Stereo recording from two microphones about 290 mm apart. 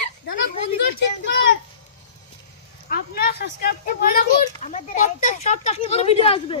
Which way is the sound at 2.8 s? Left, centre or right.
Left.